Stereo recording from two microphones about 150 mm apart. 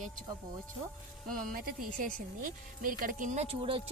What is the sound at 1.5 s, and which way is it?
Speech, 65° right (ahead or behind).